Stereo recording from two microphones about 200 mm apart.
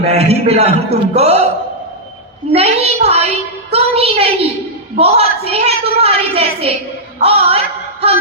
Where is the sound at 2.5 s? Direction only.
30° right (ahead or behind).